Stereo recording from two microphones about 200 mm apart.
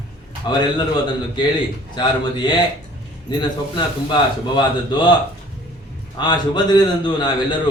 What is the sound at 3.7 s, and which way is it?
A man's voice, 25° left (ahead or behind).